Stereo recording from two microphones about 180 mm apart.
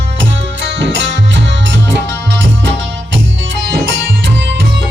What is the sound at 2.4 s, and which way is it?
Music, 80° right.